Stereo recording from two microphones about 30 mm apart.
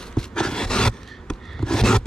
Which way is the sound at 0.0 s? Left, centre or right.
Left.